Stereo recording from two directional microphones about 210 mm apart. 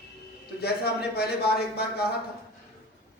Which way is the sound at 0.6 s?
50° left (ahead or behind).